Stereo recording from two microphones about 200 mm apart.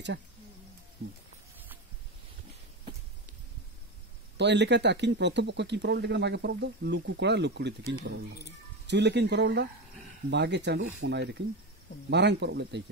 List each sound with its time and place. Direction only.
4.4 s speech: 60° right (ahead or behind)